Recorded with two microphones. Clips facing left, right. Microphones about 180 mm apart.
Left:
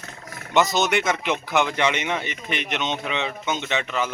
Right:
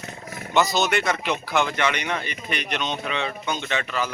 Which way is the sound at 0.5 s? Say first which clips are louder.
Left 1 dB; 20° left (ahead or behind).